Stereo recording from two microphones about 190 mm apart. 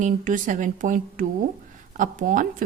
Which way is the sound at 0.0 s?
45° right (ahead or behind).